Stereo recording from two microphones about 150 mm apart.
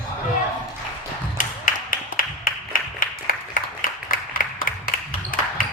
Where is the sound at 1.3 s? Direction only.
65° left (ahead or behind).